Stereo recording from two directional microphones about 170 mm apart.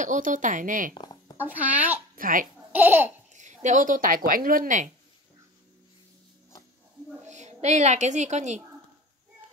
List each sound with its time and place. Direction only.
0.0 s speech: 50° right (ahead or behind)
1.4 s speech: 10° right (ahead or behind)
2.1 s a child's voice: 55° right (ahead or behind)
2.7 s speech: 10° right (ahead or behind)
3.3 s speech: 45° right (ahead or behind)
7.2 s a woman's voice: 45° right (ahead or behind)